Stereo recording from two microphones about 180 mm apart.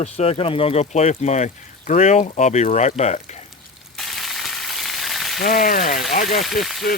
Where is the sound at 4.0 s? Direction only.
Centre (ahead or behind).